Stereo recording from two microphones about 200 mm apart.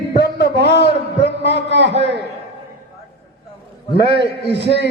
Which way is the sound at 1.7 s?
60° right (ahead or behind).